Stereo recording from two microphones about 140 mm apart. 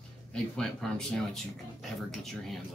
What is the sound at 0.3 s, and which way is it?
Speech, 5° left (ahead or behind).